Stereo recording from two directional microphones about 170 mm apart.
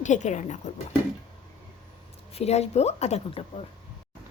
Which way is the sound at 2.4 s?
40° left (ahead or behind).